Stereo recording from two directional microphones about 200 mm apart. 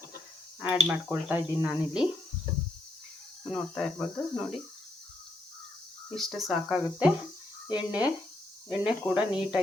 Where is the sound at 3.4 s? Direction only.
5° left (ahead or behind).